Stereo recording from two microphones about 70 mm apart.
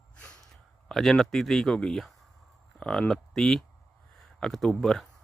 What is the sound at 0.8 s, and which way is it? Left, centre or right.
Speech, centre.